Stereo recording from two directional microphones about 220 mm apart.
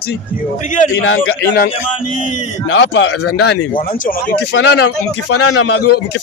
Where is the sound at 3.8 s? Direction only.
40° left (ahead or behind).